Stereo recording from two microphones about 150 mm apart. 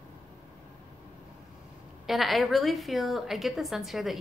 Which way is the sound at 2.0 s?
Centre (ahead or behind).